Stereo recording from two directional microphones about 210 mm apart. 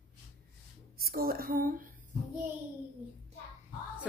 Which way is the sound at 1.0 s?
45° right (ahead or behind).